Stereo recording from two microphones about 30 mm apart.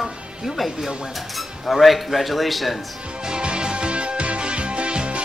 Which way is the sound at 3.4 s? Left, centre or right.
Right.